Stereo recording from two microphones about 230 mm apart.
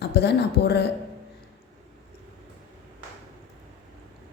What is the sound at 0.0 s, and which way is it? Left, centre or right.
Speech, left.